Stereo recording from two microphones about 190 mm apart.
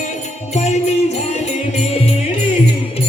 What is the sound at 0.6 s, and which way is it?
Music, 35° left (ahead or behind).